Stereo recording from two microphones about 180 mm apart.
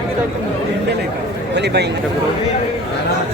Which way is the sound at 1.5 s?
70° right (ahead or behind).